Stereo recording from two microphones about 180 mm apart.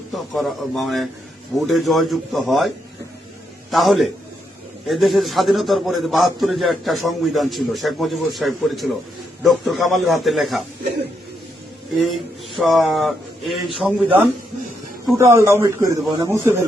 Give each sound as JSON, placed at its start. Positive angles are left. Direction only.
{"t": 0.1, "sound": "a man's voice", "side_deg": 0}
{"t": 12.1, "sound": "a man's voice", "side_deg": 0}
{"t": 15.2, "sound": "speech", "side_deg": -15}